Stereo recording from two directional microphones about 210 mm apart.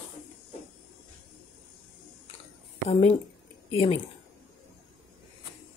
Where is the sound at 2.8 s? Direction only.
30° left (ahead or behind).